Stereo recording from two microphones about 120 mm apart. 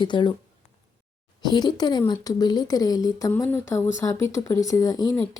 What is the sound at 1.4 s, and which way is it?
A woman's voice, 35° left (ahead or behind).